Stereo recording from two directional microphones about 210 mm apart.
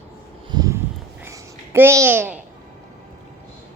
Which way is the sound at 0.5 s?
15° right (ahead or behind).